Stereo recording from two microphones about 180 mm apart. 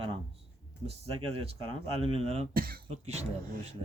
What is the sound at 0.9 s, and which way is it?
Speech, 35° right (ahead or behind).